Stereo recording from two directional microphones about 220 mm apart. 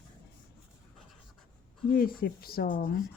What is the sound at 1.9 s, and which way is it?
Speech, 40° left (ahead or behind).